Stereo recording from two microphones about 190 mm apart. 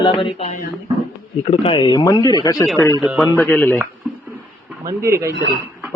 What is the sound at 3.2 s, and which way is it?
Speech, 10° left (ahead or behind).